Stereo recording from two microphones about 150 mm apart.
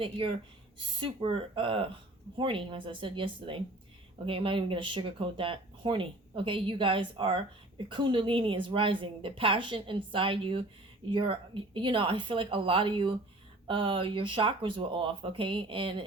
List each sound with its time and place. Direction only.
0.0 s speech: 35° right (ahead or behind)